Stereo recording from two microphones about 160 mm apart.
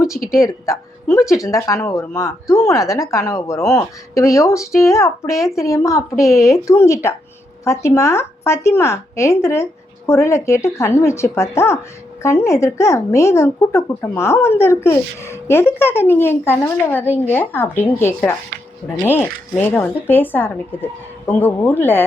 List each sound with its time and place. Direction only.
0.3 s speech: 20° left (ahead or behind)